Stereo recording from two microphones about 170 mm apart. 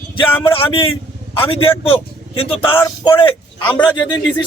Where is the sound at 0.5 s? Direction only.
30° left (ahead or behind).